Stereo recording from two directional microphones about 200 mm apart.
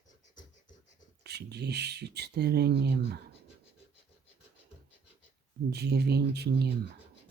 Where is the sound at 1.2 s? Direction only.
55° right (ahead or behind).